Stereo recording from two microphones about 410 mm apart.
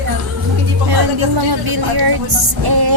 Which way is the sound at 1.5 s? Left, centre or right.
Right.